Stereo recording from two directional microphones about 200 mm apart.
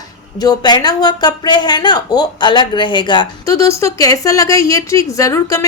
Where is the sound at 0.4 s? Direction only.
20° left (ahead or behind).